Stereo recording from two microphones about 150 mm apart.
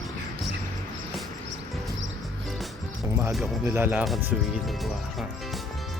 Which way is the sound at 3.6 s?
15° right (ahead or behind).